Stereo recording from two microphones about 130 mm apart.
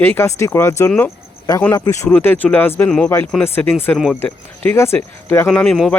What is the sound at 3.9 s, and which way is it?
Speech, centre (ahead or behind).